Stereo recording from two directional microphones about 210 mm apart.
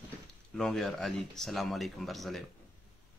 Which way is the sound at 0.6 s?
Centre (ahead or behind).